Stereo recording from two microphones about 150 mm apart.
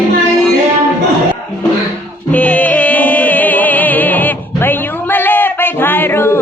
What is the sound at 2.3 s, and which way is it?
Music, 10° left (ahead or behind).